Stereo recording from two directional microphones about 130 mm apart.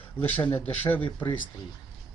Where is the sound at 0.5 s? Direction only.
15° left (ahead or behind).